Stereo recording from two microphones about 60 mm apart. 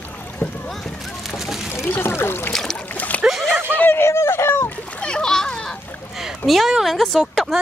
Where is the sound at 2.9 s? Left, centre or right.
Left.